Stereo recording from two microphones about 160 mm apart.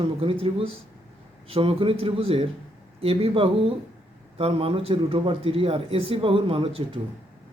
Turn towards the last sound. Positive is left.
turn(degrees=-35)  # may be behind; listen again after turning